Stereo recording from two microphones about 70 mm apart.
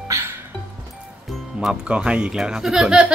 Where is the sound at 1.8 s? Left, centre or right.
Centre.